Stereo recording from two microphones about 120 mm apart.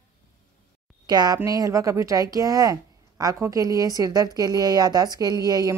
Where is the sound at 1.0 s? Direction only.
35° right (ahead or behind).